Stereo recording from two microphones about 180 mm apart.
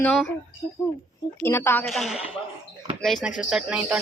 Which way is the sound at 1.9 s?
Centre (ahead or behind).